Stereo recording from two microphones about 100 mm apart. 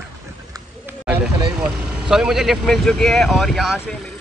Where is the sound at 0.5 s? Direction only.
35° right (ahead or behind).